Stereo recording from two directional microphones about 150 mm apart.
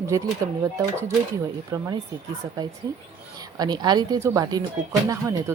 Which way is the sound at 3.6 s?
30° right (ahead or behind).